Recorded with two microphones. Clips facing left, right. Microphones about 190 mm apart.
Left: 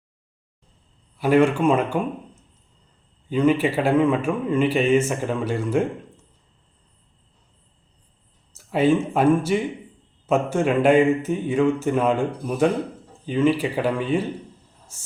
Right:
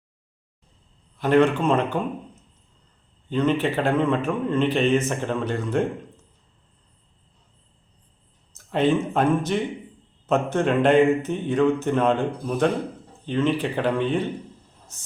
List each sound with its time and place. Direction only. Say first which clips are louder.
1.2 s a man's voice: left 1 dB; 10° left (ahead or behind)
3.2 s a man's voice: left 3 dB; 10° left (ahead or behind)
8.5 s a man's voice: left 2 dB; 5° left (ahead or behind)